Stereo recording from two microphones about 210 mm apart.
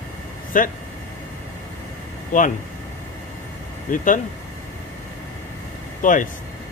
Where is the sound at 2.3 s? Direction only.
40° left (ahead or behind).